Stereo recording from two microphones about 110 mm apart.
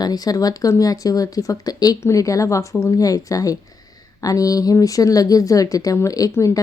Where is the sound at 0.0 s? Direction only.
35° left (ahead or behind).